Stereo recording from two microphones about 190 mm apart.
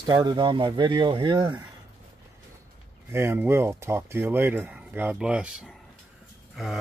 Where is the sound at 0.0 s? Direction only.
20° right (ahead or behind).